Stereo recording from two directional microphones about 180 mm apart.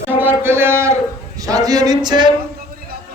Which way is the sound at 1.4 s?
20° right (ahead or behind).